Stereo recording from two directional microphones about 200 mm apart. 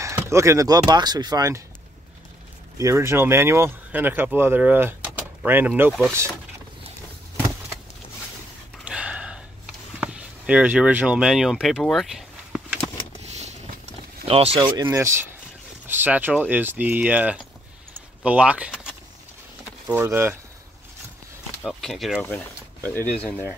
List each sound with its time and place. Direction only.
0.0 s speech: 15° right (ahead or behind)
2.8 s speech: 15° right (ahead or behind)
8.8 s a sound: 5° right (ahead or behind)
14.2 s speech: 30° right (ahead or behind); by 20.3 s 10° right (ahead or behind)
21.6 s speech: centre (ahead or behind)